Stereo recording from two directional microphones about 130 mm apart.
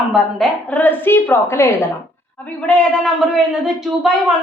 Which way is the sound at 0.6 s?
15° left (ahead or behind).